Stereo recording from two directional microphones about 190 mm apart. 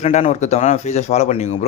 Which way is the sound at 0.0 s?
40° left (ahead or behind).